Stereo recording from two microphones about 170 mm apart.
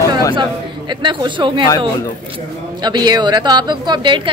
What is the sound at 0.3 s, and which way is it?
Speech, 25° right (ahead or behind).